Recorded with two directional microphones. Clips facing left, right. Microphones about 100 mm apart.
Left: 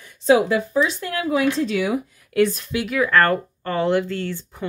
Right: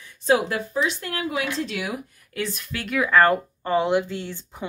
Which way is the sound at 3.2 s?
15° right (ahead or behind).